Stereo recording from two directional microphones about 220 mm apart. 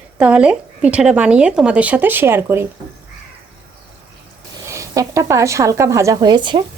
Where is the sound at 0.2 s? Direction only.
5° right (ahead or behind).